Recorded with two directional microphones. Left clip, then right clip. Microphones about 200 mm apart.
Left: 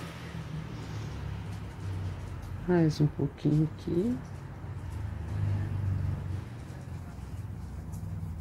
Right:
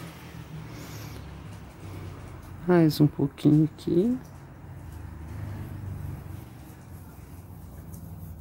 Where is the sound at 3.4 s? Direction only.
55° right (ahead or behind).